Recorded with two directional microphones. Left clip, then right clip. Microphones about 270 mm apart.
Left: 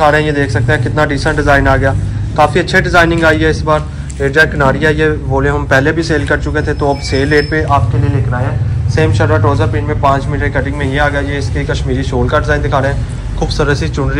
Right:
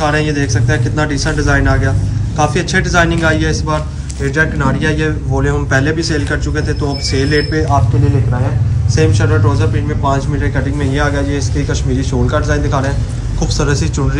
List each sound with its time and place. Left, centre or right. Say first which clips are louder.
0.0 s a man's voice: left 5 dB; centre
8.9 s a man's voice: left 3 dB; centre